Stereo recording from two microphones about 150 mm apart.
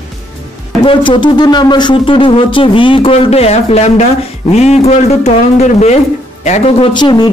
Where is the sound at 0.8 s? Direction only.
35° left (ahead or behind).